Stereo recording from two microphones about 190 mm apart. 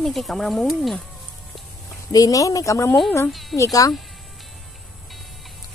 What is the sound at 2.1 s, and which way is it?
Speech, 20° left (ahead or behind).